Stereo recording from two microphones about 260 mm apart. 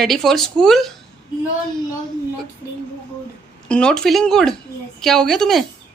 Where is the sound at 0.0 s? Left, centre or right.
Centre.